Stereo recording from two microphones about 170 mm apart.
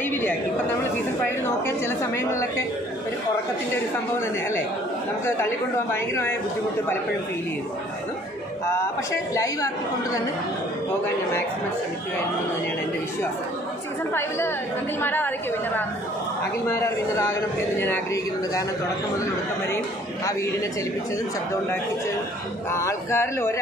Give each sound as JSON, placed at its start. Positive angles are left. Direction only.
{"t": 0.1, "sound": "speech", "side_deg": 10}
{"t": 2.1, "sound": "a man's voice", "side_deg": 15}
{"t": 5.2, "sound": "a man's voice", "side_deg": 15}
{"t": 9.3, "sound": "a woman's voice", "side_deg": 20}
{"t": 15.0, "sound": "a man's voice", "side_deg": 10}
{"t": 22.7, "sound": "a man's voice", "side_deg": 15}